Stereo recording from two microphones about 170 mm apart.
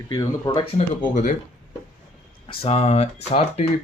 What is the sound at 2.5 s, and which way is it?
Speech, 35° left (ahead or behind).